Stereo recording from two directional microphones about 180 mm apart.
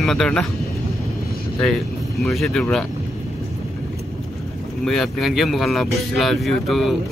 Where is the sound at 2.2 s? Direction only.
Centre (ahead or behind).